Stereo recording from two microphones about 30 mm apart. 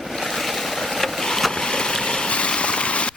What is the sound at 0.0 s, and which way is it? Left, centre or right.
Boat, centre.